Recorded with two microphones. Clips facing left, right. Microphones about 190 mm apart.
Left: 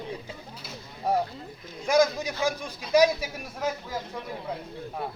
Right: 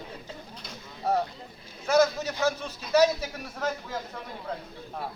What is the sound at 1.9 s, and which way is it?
A man's voice, 10° left (ahead or behind).